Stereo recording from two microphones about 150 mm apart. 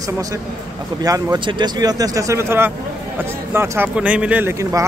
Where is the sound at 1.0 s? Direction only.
25° right (ahead or behind).